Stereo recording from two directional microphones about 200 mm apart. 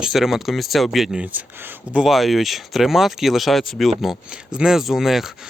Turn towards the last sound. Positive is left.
turn(degrees=0)  # may be behind; listen again after turning